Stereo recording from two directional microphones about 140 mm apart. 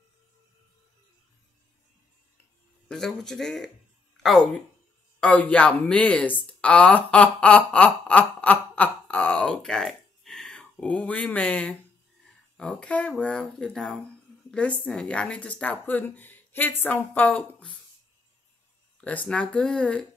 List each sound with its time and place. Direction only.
2.9 s speech: 5° left (ahead or behind)
6.4 s a sound: 10° left (ahead or behind)
12.5 s speech: 5° left (ahead or behind)
18.9 s speech: 10° left (ahead or behind)